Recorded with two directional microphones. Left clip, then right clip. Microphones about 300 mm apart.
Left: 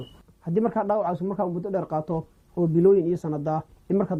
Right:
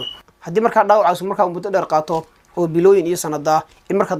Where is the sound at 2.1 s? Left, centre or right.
Right.